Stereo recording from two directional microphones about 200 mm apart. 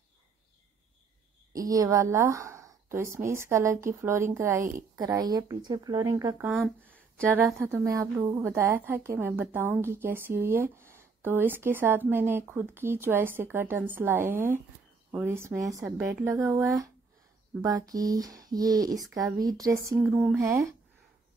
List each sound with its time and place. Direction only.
1.5 s speech: 15° right (ahead or behind)
6.5 s speech: 5° left (ahead or behind)
7.3 s speech: 10° right (ahead or behind)